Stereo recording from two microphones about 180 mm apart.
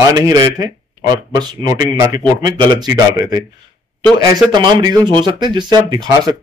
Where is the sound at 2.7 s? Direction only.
20° right (ahead or behind).